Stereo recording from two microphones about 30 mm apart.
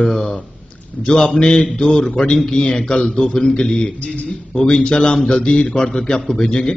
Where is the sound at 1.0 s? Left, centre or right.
Left.